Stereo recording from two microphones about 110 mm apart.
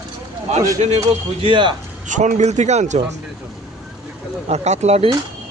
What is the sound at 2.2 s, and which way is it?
Speech, 90° right.